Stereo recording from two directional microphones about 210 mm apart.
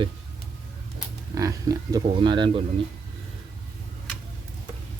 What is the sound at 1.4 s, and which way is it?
Speech, 15° right (ahead or behind).